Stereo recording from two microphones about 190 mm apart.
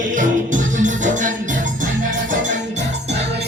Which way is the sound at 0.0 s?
45° right (ahead or behind).